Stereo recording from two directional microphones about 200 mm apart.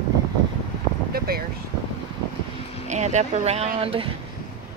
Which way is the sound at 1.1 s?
50° right (ahead or behind).